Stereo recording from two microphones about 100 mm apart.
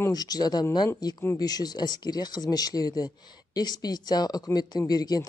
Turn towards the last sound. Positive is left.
turn(degrees=40)  # may be behind; listen again after turning